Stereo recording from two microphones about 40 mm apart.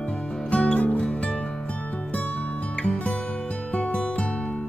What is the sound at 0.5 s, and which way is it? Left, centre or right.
Music, left.